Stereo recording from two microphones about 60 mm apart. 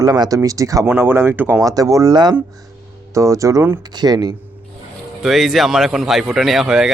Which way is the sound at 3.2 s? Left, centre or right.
Right.